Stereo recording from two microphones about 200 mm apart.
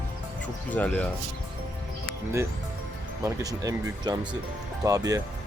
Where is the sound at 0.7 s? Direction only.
5° left (ahead or behind).